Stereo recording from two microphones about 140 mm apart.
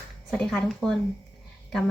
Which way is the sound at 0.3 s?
5° left (ahead or behind).